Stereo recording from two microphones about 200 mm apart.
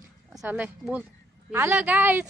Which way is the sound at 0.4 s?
5° right (ahead or behind).